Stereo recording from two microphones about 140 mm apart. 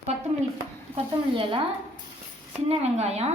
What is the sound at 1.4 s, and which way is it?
Speech, 35° right (ahead or behind).